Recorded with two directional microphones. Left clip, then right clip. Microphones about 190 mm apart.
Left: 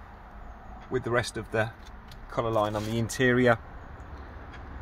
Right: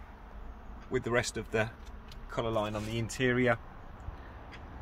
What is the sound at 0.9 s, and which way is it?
Speech, 25° left (ahead or behind).